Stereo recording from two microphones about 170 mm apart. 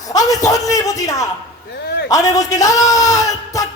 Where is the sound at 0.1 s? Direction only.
20° left (ahead or behind).